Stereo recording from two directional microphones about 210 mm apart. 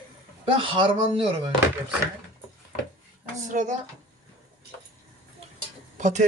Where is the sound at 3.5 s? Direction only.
40° right (ahead or behind).